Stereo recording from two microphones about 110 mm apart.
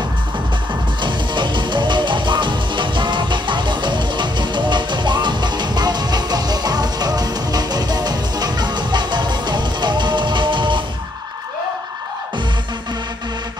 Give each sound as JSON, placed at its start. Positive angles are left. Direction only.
{"t": 1.0, "sound": "music", "side_deg": -45}